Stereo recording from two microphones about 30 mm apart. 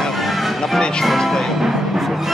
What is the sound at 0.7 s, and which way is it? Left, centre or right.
Speech, left.